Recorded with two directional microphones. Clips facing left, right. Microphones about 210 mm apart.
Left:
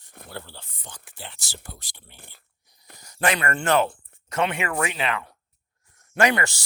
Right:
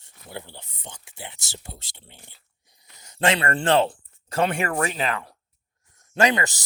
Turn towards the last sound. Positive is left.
turn(degrees=-20)  # may be behind; listen again after turning